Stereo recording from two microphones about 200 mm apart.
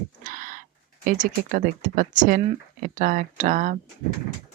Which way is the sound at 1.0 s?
40° right (ahead or behind).